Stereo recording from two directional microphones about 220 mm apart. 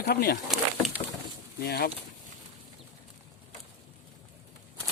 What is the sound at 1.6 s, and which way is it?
Speech, 45° left (ahead or behind).